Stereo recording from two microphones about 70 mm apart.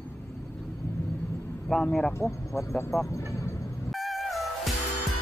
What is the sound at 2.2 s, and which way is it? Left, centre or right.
Speech, left.